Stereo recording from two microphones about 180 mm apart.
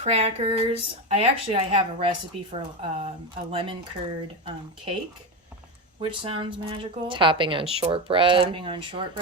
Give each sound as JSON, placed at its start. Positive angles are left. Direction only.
{"t": 0.0, "sound": "speech", "side_deg": -40}
{"t": 6.0, "sound": "speech", "side_deg": -30}